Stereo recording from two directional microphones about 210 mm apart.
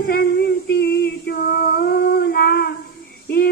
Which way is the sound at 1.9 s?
50° left (ahead or behind).